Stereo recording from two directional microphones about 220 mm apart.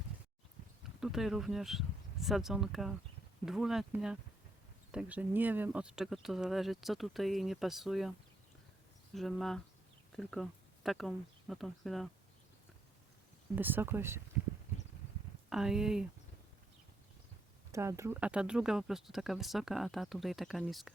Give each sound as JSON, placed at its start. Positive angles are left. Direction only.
{"t": 0.9, "sound": "speech", "side_deg": 0}
{"t": 9.1, "sound": "speech", "side_deg": 0}
{"t": 13.6, "sound": "speech", "side_deg": -10}
{"t": 15.4, "sound": "speech", "side_deg": 0}
{"t": 17.7, "sound": "speech", "side_deg": -15}